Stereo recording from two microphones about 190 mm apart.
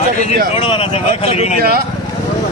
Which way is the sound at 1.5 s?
55° right (ahead or behind).